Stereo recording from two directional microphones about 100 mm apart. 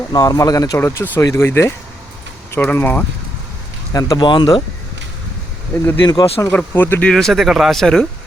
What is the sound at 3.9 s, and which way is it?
Speech, 35° left (ahead or behind).